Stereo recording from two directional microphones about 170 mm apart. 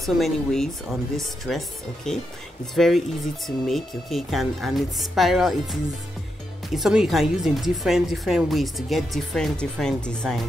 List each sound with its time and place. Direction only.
0.0 s speech: centre (ahead or behind)